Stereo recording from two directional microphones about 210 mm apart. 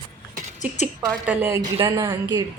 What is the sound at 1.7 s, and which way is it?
Speech, 20° right (ahead or behind).